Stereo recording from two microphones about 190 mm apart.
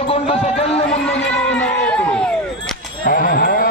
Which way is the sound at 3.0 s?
50° left (ahead or behind).